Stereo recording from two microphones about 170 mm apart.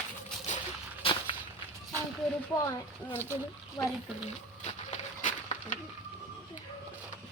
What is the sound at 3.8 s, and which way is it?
Speech, 15° left (ahead or behind).